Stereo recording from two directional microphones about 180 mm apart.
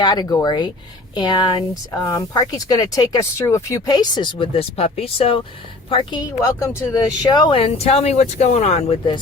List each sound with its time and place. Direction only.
0.0 s speech: 25° left (ahead or behind)